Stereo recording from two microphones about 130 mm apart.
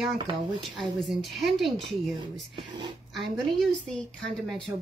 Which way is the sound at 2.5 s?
40° right (ahead or behind).